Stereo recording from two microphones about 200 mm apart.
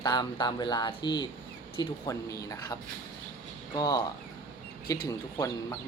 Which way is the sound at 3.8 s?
20° left (ahead or behind).